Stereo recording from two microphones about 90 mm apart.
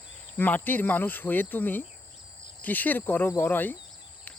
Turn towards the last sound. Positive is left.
turn(degrees=20)  # may be behind; listen again after turning